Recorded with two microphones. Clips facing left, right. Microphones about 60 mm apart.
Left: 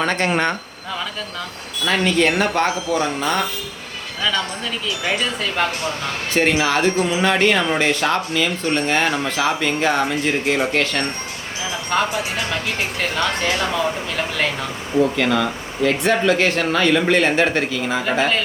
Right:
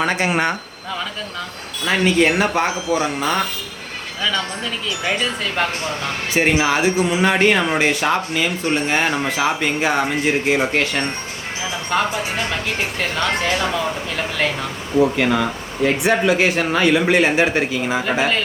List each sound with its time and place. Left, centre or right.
0.0 s speech: centre
1.8 s speech: centre
4.2 s speech: centre
15.1 s speech: centre
18.0 s speech: centre